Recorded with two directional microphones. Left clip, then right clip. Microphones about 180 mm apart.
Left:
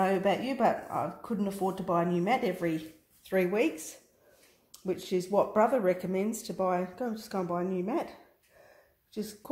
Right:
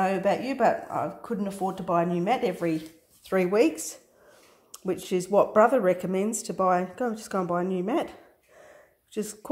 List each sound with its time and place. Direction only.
0.0 s speech: 20° right (ahead or behind); by 8.1 s 35° right (ahead or behind)
9.1 s speech: 35° right (ahead or behind)